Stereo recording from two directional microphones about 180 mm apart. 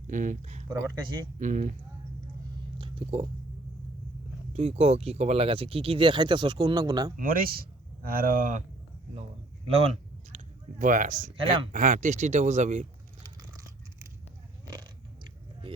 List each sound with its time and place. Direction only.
0.1 s speech: 45° right (ahead or behind)
0.7 s speech: 20° right (ahead or behind)
1.4 s speech: 45° right (ahead or behind)
2.7 s whispering: 30° right (ahead or behind)
4.5 s speech: 35° right (ahead or behind)
7.2 s speech: 50° right (ahead or behind)
9.7 s a sound: 35° right (ahead or behind)
11.7 s speech: 45° right (ahead or behind)
13.2 s biting: 20° right (ahead or behind)